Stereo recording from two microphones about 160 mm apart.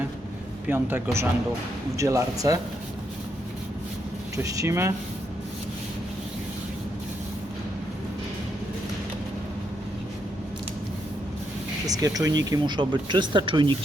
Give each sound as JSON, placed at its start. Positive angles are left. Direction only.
{"t": 0.7, "sound": "speech", "side_deg": -10}
{"t": 4.4, "sound": "speech", "side_deg": -20}
{"t": 11.9, "sound": "speech", "side_deg": -20}